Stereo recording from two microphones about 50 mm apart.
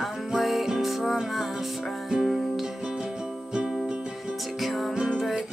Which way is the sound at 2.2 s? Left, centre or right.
Centre.